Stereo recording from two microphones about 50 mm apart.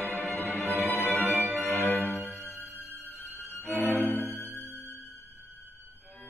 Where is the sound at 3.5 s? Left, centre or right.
Left.